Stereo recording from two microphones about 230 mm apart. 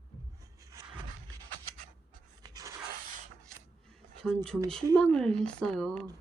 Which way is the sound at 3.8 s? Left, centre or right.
Centre.